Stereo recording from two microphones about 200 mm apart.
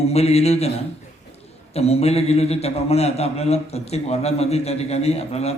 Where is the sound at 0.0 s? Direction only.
30° left (ahead or behind).